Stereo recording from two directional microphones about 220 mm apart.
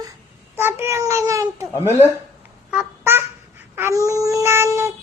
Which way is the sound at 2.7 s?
10° right (ahead or behind).